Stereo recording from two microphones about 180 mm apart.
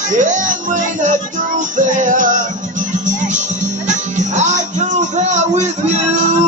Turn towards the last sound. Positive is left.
turn(degrees=-40)  # may be behind; listen again after turning